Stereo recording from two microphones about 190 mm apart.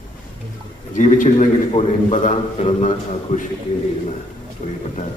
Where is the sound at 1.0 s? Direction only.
40° left (ahead or behind).